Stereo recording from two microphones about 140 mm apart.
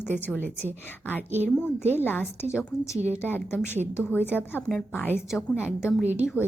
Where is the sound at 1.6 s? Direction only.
15° left (ahead or behind).